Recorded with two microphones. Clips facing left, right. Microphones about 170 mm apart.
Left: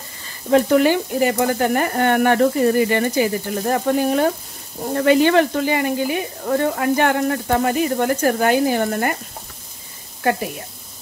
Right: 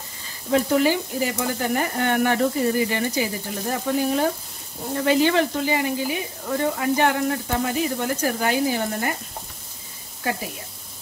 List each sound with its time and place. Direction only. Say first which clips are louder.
0.5 s speech: left 5 dB; 60° left (ahead or behind)